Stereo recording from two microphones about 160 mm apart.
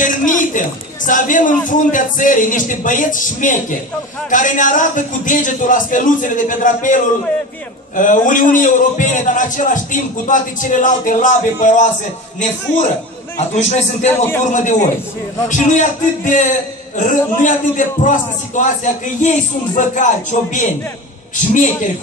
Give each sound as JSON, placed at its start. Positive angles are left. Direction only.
{"t": 0.0, "sound": "a man's voice", "side_deg": 55}
{"t": 13.6, "sound": "a man's voice", "side_deg": 45}
{"t": 14.0, "sound": "a man's voice", "side_deg": 10}
{"t": 14.4, "sound": "a man's voice", "side_deg": 50}